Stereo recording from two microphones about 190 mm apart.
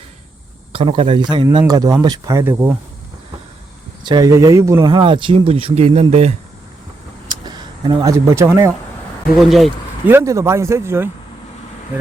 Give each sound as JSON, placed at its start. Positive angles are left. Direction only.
{"t": 0.7, "sound": "speech", "side_deg": -30}
{"t": 4.0, "sound": "speech", "side_deg": -20}
{"t": 7.3, "sound": "vehicle", "side_deg": -25}
{"t": 9.5, "sound": "speech", "side_deg": 0}
{"t": 10.1, "sound": "speech", "side_deg": -15}